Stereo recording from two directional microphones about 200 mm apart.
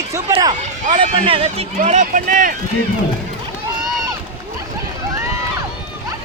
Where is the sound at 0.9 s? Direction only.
30° right (ahead or behind).